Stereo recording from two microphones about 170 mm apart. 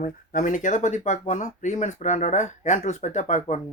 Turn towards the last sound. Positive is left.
turn(degrees=45)  # may be behind; listen again after turning